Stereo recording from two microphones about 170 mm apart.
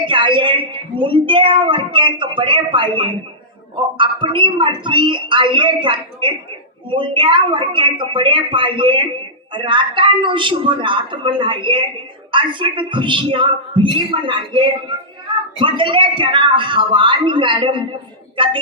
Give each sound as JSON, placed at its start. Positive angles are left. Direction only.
{"t": 0.0, "sound": "a woman's voice", "side_deg": -30}